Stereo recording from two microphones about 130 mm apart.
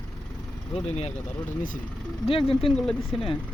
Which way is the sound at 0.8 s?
55° left (ahead or behind).